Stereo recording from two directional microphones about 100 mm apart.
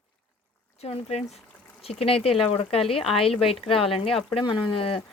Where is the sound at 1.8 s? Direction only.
75° left (ahead or behind).